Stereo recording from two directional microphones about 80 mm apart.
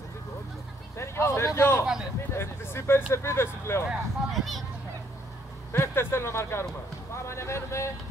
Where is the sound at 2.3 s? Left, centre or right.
Left.